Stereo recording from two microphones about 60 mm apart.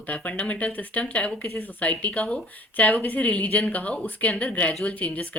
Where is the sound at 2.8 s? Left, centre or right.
Left.